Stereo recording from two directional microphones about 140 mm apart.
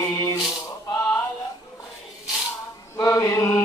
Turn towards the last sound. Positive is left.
turn(degrees=20)  # may be behind; listen again after turning